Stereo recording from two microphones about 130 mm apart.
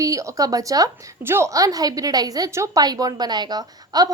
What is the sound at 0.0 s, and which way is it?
A woman's voice, 25° right (ahead or behind).